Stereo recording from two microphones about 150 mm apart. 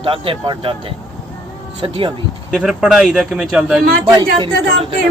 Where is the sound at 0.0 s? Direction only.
35° right (ahead or behind).